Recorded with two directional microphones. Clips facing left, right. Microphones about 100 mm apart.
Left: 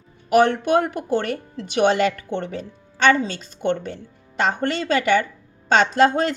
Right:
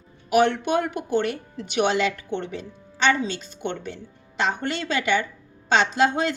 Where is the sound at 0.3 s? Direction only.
45° left (ahead or behind).